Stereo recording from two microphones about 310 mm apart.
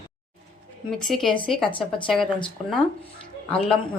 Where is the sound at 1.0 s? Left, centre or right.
Centre.